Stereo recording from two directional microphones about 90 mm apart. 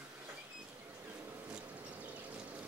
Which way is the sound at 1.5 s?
15° right (ahead or behind).